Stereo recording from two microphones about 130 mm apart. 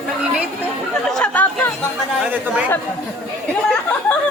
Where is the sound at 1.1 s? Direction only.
10° left (ahead or behind).